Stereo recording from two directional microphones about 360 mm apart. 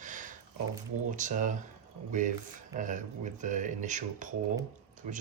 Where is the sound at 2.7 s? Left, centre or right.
Right.